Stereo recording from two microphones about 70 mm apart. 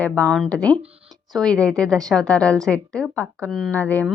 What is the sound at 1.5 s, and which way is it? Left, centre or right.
A woman's voice, centre.